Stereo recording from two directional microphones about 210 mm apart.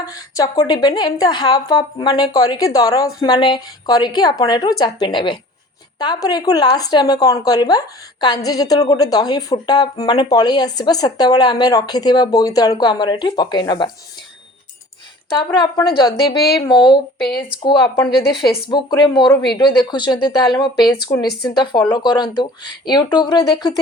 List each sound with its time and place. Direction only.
0.0 s speech: 15° left (ahead or behind)
15.5 s speech: 20° left (ahead or behind)
16.3 s speech: 50° left (ahead or behind)
16.6 s speech: 20° left (ahead or behind)